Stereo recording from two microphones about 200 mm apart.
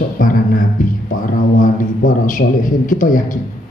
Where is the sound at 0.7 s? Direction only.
40° left (ahead or behind).